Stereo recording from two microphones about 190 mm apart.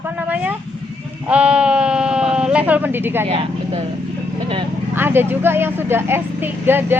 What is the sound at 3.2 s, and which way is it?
Speech, 35° right (ahead or behind).